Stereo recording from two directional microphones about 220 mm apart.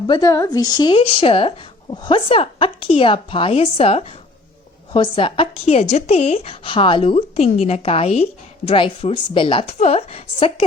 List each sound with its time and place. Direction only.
0.1 s speech: 15° left (ahead or behind)